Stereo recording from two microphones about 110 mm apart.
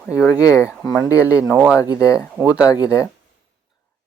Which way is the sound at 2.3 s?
15° right (ahead or behind).